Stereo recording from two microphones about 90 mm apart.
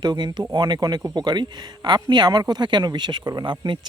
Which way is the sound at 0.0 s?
55° right (ahead or behind).